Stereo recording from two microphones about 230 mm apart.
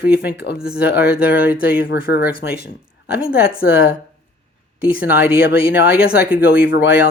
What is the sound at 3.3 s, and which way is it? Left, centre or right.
Speech, left.